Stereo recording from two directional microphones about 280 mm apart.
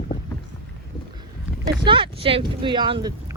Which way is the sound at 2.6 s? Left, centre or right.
Centre.